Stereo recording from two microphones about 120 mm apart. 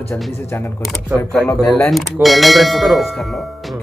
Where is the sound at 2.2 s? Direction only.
Centre (ahead or behind).